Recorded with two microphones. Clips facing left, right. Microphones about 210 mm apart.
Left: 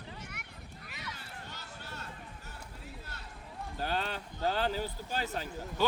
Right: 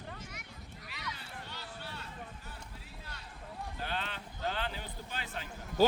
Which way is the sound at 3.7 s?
40° left (ahead or behind).